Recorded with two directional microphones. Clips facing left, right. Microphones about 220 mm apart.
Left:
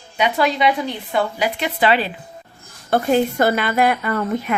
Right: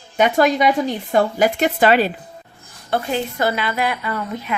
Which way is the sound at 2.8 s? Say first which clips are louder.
Left 5 dB; 50° left (ahead or behind).